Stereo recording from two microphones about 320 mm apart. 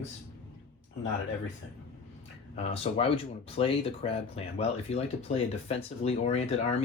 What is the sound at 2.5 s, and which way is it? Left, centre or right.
Speech, centre.